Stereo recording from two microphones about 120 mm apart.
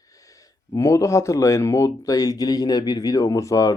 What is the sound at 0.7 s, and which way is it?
Speech, 25° left (ahead or behind).